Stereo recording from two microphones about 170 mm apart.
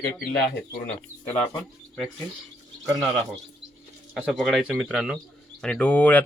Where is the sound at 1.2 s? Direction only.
10° left (ahead or behind).